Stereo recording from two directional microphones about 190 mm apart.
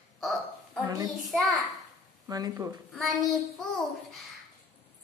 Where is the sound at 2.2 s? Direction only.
20° right (ahead or behind).